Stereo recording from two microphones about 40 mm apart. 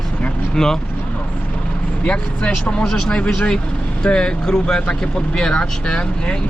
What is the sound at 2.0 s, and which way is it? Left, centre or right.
Speech, left.